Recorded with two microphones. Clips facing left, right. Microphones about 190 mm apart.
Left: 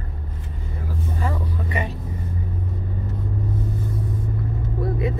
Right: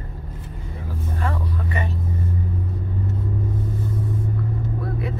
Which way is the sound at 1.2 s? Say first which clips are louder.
Right 2 dB; 15° left (ahead or behind).